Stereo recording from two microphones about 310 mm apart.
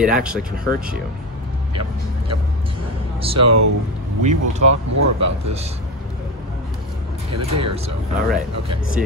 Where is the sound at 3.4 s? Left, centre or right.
Right.